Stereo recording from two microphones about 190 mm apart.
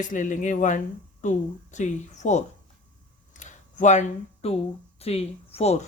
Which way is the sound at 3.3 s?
40° left (ahead or behind).